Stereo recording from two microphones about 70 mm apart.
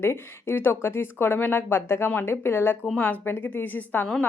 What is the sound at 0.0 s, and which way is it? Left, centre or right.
A woman's voice, left.